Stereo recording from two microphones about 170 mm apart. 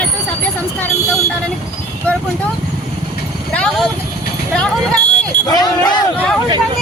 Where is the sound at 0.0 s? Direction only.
10° left (ahead or behind).